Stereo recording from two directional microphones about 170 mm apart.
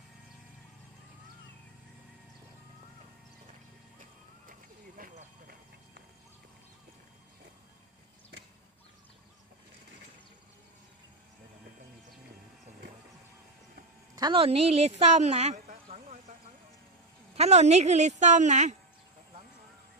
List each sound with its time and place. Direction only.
4.9 s clip-clop: 55° right (ahead or behind)
14.2 s a woman's voice: 30° right (ahead or behind)
17.3 s a woman's voice: 40° right (ahead or behind)